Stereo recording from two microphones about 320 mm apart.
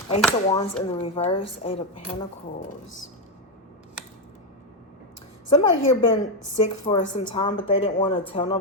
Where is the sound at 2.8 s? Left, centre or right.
Left.